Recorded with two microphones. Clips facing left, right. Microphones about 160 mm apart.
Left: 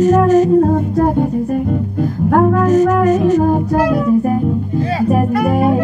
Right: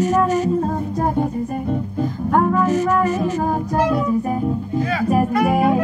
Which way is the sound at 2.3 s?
55° left (ahead or behind).